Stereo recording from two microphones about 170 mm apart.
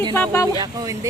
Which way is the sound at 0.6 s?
20° right (ahead or behind).